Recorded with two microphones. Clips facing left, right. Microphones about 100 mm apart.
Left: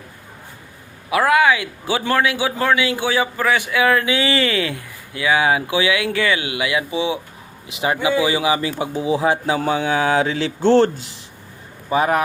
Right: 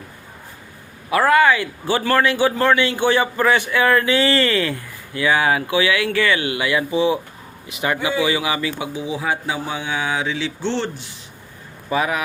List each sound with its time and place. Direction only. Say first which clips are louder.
1.1 s a man's voice: right 1 dB; 10° left (ahead or behind); by 9.6 s 35° left (ahead or behind)
9.6 s speech: left 7 dB; 45° left (ahead or behind)